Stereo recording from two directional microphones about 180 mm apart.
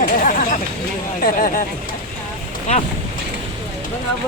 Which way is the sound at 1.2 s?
50° left (ahead or behind).